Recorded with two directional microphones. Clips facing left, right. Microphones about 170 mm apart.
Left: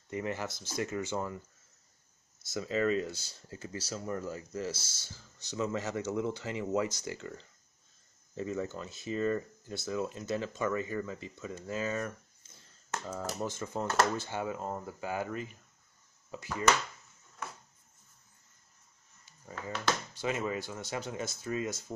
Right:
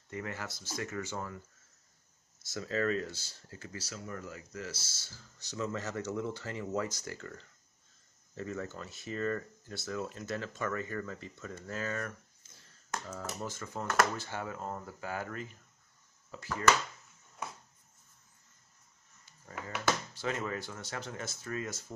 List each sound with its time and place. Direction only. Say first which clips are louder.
0.1 s speech: left 5 dB; 20° left (ahead or behind)
2.5 s speech: left 2 dB; 15° left (ahead or behind)
13.2 s speech: left 4 dB; 25° left (ahead or behind)
20.2 s speech: left 2 dB; 15° left (ahead or behind)